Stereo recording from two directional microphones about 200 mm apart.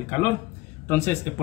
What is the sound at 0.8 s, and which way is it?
Speech, 10° left (ahead or behind).